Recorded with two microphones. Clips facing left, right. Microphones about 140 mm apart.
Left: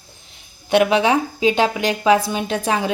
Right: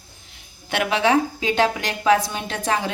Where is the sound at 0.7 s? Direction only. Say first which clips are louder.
Left 4 dB; 20° left (ahead or behind).